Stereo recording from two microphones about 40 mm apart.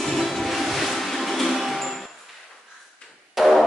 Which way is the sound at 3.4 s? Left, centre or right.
Centre.